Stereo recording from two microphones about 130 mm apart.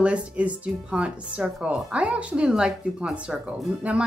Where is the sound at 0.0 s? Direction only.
10° right (ahead or behind).